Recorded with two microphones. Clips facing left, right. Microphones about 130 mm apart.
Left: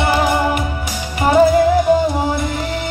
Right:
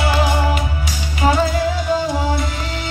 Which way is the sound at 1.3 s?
55° left (ahead or behind).